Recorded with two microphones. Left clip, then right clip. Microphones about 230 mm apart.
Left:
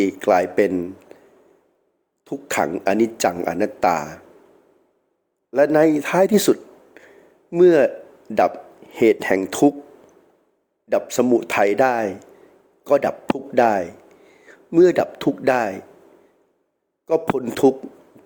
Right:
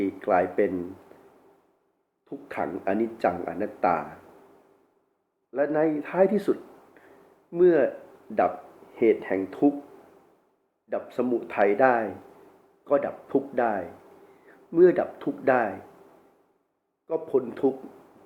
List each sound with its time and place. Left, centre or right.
0.0 s speech: left
2.2 s speech: left
5.5 s a man's voice: left
9.0 s speech: left
10.8 s a man's voice: left
17.1 s speech: left